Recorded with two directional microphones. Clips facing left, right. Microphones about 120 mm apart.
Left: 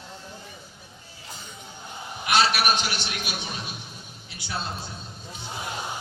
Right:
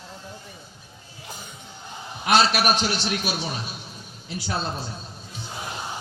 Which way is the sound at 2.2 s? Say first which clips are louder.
Right 3 dB; 40° right (ahead or behind).